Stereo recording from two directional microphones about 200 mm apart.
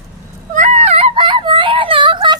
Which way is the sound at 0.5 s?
35° right (ahead or behind).